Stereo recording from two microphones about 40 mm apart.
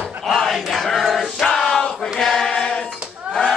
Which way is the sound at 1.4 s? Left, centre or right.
Centre.